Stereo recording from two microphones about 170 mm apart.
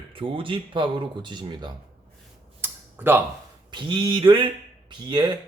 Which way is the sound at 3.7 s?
25° right (ahead or behind).